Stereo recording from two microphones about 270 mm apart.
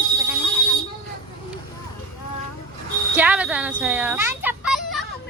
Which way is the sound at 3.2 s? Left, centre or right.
Centre.